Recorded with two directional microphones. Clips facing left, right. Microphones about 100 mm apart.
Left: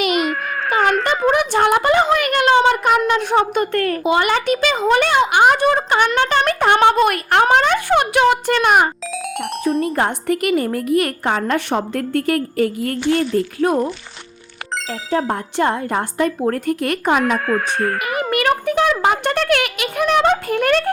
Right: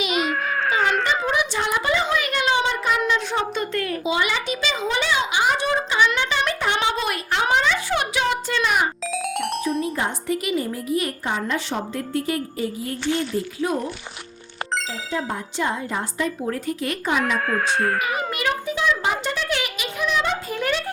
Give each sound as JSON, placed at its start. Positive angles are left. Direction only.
{"t": 0.1, "sound": "a sound", "side_deg": 5}
{"t": 0.7, "sound": "a sound", "side_deg": 60}
{"t": 1.0, "sound": "speech", "side_deg": 50}
{"t": 9.1, "sound": "speech", "side_deg": 0}
{"t": 9.9, "sound": "a woman's voice", "side_deg": 55}
{"t": 15.1, "sound": "a woman's voice", "side_deg": 60}
{"t": 17.3, "sound": "speech", "side_deg": 0}
{"t": 18.2, "sound": "a woman's voice", "side_deg": 60}